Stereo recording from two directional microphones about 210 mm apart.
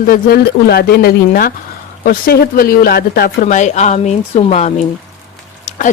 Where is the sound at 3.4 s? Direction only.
35° left (ahead or behind).